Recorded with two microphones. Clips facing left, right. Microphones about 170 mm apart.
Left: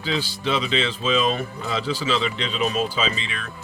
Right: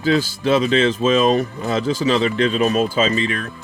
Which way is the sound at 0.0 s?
45° right (ahead or behind).